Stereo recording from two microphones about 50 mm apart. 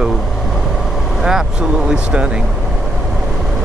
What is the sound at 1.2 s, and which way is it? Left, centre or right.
Speech, centre.